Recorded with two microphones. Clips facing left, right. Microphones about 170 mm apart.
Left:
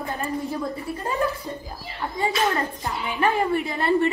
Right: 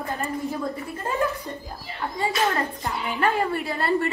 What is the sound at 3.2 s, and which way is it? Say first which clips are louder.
Speech: left 2 dB; 15° left (ahead or behind).